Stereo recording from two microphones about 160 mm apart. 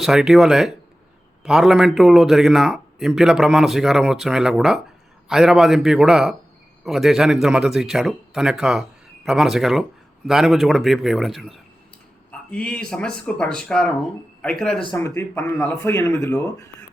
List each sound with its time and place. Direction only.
0.0 s a man's voice: centre (ahead or behind)
14.9 s speech: 15° left (ahead or behind)